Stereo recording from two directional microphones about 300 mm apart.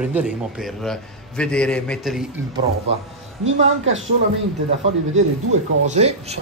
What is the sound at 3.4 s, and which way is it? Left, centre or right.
Speech, right.